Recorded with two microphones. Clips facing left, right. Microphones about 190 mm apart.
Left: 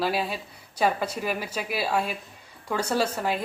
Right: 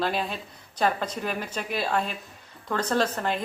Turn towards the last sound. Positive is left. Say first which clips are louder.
# even
turn(degrees=5)  # may be behind; listen again after turning